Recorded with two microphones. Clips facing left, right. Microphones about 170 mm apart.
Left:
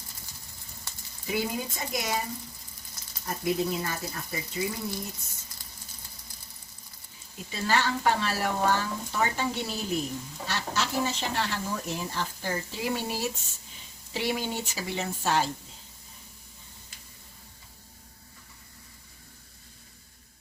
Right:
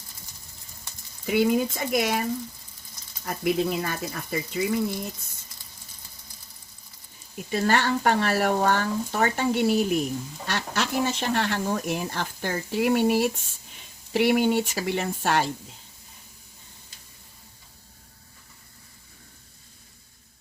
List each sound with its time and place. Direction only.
1.3 s speech: 70° right (ahead or behind)
3.2 s speech: 70° right (ahead or behind)
7.5 s speech: 60° right (ahead or behind)